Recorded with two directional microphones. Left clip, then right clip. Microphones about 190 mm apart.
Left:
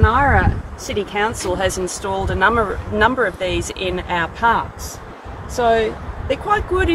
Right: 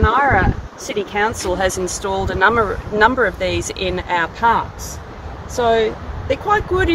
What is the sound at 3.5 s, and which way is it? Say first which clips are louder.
Speech: right 1 dB; 55° right (ahead or behind).